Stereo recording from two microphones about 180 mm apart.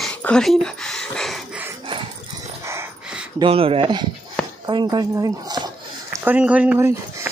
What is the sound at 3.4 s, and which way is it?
Speech, 30° right (ahead or behind).